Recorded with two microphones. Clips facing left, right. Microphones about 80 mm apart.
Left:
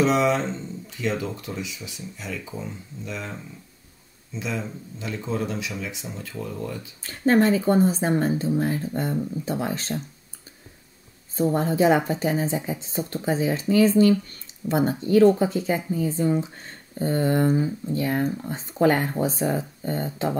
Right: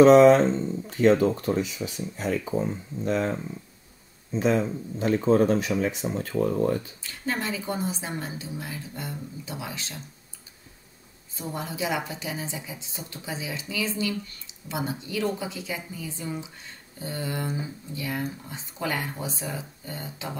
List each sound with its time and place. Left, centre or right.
0.0 s speech: right
7.0 s a woman's voice: left
11.3 s a woman's voice: left